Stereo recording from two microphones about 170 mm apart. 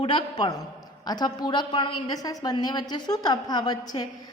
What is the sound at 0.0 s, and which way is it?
A woman's voice, 30° left (ahead or behind).